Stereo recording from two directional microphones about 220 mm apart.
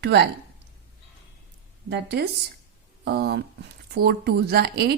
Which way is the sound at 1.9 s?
50° right (ahead or behind).